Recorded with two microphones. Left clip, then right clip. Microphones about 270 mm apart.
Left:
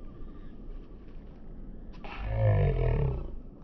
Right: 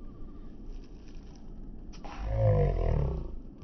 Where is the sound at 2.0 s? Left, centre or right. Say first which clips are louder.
Right 2 dB; left.